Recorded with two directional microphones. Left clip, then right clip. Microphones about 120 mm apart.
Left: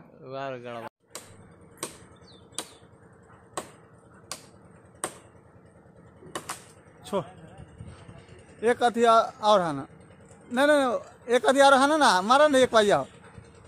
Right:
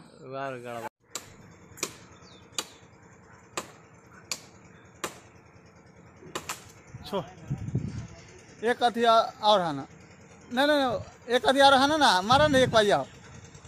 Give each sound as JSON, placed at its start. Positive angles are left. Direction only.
{"t": 0.2, "sound": "speech", "side_deg": 5}
{"t": 8.5, "sound": "speech", "side_deg": 40}